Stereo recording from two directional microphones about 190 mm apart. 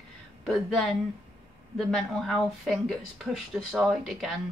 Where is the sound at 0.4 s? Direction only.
Centre (ahead or behind).